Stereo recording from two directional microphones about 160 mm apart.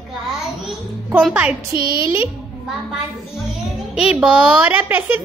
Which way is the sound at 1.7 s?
25° right (ahead or behind).